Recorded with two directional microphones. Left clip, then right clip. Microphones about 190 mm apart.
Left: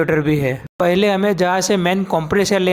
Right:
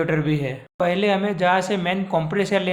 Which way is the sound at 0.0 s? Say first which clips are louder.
Left 6 dB; 40° left (ahead or behind).